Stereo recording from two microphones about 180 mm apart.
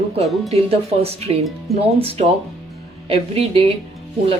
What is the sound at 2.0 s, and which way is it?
Speech, 35° right (ahead or behind).